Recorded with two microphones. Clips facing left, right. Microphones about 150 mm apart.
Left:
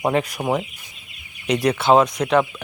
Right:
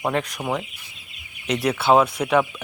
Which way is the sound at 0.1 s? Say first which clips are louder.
Left 4 dB; 5° left (ahead or behind).